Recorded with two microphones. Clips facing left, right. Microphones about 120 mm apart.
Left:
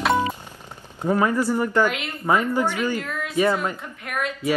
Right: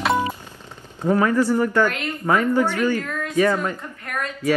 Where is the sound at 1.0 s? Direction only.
15° left (ahead or behind).